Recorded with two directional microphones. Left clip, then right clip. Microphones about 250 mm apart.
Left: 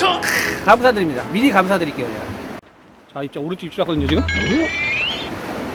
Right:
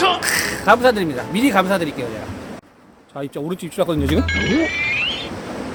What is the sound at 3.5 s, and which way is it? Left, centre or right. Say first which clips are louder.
Speech: right 1 dB; right.